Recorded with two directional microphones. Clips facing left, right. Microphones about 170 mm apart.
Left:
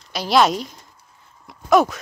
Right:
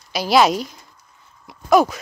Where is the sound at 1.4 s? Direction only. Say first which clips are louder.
Right 1 dB; centre (ahead or behind).